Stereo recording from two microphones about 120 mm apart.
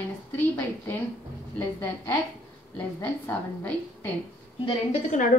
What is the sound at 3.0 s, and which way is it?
Speech, 15° left (ahead or behind).